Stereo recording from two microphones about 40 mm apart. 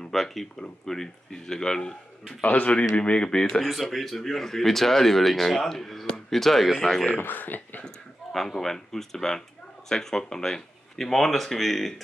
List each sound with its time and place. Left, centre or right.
0.0 s speech: centre
2.4 s speech: left; by 3.6 s centre
3.6 s speech: centre
7.2 s speech: left
8.3 s speech: centre